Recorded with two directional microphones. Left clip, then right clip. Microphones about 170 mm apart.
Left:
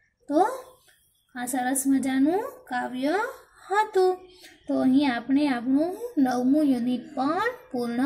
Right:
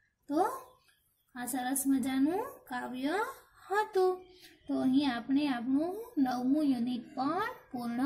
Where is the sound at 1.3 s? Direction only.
Centre (ahead or behind).